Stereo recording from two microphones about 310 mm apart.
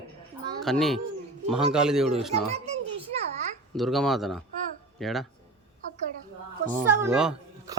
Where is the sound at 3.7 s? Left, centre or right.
Centre.